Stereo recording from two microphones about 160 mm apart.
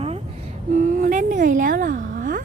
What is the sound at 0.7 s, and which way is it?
Speech, 50° right (ahead or behind).